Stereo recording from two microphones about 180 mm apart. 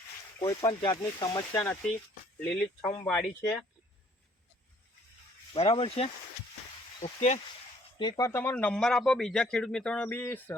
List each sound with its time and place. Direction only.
0.3 s speech: 20° left (ahead or behind)
2.4 s speech: 5° left (ahead or behind)
5.5 s speech: 25° left (ahead or behind)
7.0 s speech: 40° left (ahead or behind)
7.9 s speech: 25° left (ahead or behind)